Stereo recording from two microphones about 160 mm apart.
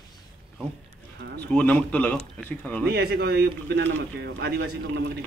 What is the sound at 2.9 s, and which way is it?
Speech, 80° right.